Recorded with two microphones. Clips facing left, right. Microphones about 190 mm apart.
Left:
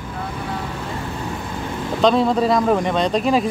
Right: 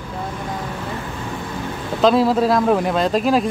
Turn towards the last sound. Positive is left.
turn(degrees=0)  # may be behind; listen again after turning